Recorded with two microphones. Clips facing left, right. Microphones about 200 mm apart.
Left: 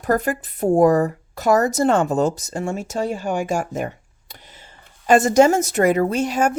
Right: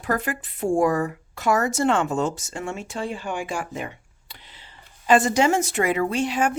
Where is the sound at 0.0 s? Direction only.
40° left (ahead or behind).